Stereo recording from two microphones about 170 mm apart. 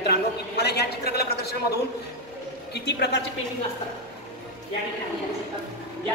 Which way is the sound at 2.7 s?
75° left (ahead or behind).